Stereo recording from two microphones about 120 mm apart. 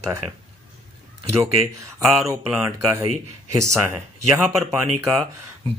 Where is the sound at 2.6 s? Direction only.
25° right (ahead or behind).